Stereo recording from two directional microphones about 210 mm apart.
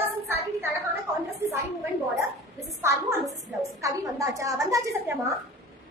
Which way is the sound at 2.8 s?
15° right (ahead or behind).